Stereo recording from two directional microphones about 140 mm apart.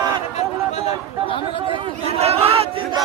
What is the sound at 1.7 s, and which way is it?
Chatter, 45° right (ahead or behind).